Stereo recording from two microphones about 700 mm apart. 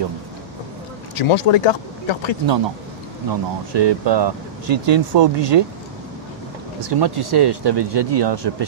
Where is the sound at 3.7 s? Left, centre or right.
Right.